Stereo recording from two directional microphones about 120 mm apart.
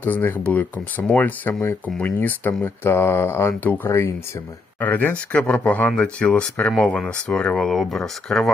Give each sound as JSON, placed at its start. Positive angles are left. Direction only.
{"t": 0.0, "sound": "speech", "side_deg": 15}